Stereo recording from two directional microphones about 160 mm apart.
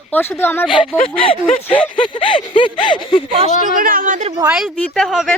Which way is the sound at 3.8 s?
60° right (ahead or behind).